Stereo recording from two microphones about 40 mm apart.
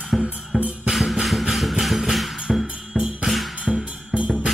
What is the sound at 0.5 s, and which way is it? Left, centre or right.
Music, centre.